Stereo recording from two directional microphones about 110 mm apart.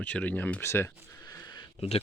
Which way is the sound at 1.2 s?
40° left (ahead or behind).